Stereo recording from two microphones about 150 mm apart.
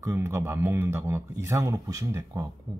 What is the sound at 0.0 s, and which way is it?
Speech, 20° right (ahead or behind).